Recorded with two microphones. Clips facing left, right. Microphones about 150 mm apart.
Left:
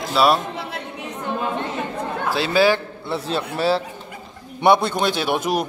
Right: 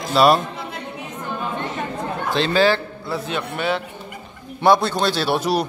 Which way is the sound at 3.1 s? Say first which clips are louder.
Left 1 dB; 30° left (ahead or behind).